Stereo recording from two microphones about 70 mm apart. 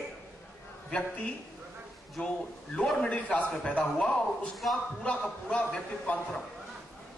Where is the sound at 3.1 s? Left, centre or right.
Centre.